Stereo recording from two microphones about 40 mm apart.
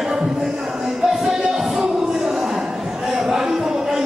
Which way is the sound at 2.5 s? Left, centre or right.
Centre.